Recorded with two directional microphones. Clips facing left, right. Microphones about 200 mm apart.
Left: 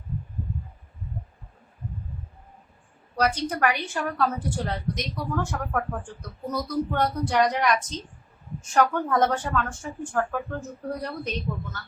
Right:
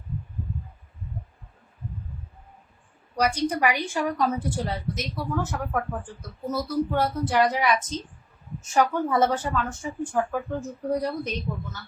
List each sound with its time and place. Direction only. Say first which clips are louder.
3.2 s a woman's voice: right 1 dB; 10° right (ahead or behind)